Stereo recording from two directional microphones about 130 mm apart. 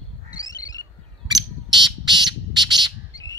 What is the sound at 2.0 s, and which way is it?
Squawk, 35° right (ahead or behind).